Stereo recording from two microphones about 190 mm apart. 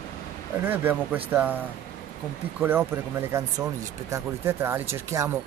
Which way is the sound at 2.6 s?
10° right (ahead or behind).